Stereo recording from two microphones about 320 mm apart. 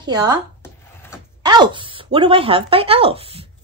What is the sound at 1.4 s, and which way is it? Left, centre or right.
Speech, centre.